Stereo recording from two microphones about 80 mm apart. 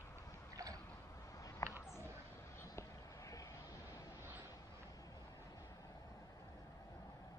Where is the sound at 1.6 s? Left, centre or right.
Left.